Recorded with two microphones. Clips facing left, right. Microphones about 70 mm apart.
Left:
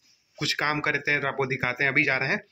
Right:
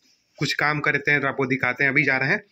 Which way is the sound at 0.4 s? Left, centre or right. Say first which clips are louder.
Right 4 dB; right.